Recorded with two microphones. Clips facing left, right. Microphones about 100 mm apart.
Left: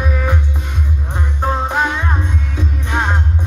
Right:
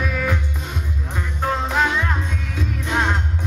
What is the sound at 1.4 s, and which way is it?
Music, 20° left (ahead or behind).